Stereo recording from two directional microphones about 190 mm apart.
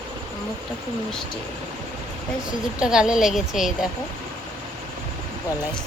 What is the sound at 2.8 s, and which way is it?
Speech, 5° right (ahead or behind).